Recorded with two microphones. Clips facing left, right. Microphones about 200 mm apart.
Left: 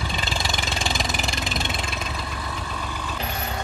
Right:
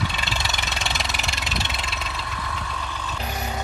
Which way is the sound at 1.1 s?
50° left (ahead or behind).